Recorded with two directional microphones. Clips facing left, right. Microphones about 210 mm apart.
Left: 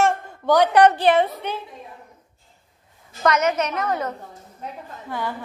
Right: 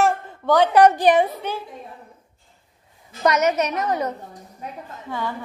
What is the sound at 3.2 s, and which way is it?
A woman's voice, 20° right (ahead or behind).